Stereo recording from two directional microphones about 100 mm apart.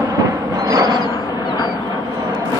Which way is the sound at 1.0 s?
45° left (ahead or behind).